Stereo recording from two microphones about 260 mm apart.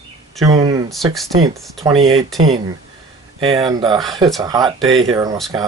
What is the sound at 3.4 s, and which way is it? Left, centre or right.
Speech, centre.